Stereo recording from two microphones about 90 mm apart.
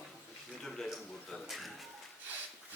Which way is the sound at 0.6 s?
5° left (ahead or behind).